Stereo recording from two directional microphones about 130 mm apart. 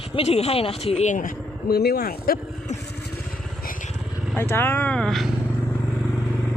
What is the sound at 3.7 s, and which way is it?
Vehicle, 90° left.